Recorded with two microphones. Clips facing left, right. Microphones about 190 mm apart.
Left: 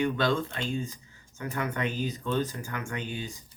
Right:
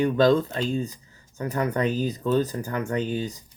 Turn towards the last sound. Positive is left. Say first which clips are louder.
# right 9 dB
turn(degrees=-40)  # may be behind; listen again after turning